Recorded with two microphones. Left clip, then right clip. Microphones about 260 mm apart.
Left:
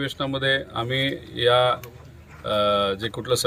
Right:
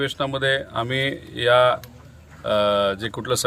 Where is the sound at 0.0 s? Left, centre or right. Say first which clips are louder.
Right 2 dB; centre.